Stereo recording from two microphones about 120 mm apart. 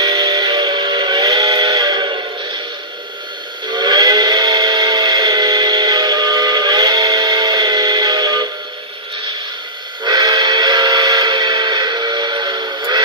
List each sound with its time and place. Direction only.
0.0 s steam whistle: 30° right (ahead or behind)
3.7 s a sound: 35° right (ahead or behind)
10.0 s music: 35° right (ahead or behind)